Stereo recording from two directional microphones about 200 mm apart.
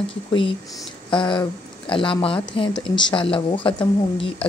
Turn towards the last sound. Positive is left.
turn(degrees=25)  # may be behind; listen again after turning